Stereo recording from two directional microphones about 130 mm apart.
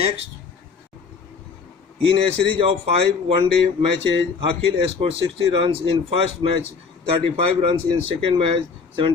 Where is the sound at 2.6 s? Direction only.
50° right (ahead or behind).